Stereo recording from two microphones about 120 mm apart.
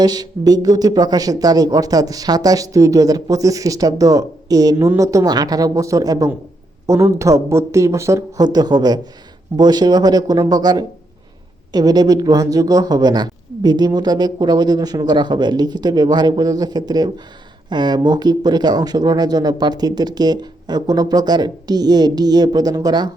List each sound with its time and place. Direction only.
0.0 s speech: 35° right (ahead or behind)